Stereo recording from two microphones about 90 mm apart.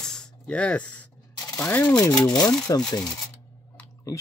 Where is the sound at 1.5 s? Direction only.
20° left (ahead or behind).